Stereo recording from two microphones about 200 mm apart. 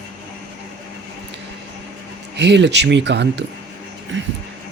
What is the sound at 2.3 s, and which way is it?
Speech, 60° right (ahead or behind).